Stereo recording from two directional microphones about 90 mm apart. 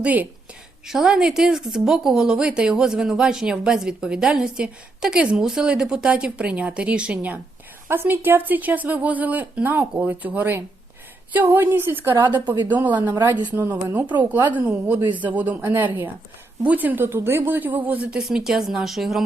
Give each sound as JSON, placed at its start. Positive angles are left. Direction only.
{"t": 0.0, "sound": "speech", "side_deg": -20}
{"t": 0.9, "sound": "speech", "side_deg": -5}
{"t": 12.2, "sound": "a woman's voice", "side_deg": -55}
{"t": 13.6, "sound": "speech", "side_deg": -30}
{"t": 14.3, "sound": "a woman's voice", "side_deg": -50}
{"t": 14.7, "sound": "speech", "side_deg": -15}